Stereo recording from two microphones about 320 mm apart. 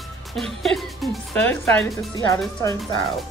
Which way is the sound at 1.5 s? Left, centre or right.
Centre.